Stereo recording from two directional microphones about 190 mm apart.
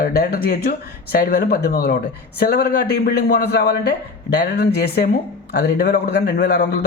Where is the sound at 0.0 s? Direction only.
55° left (ahead or behind).